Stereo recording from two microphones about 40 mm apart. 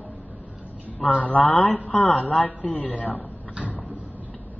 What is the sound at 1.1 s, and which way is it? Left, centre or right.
Speech, left.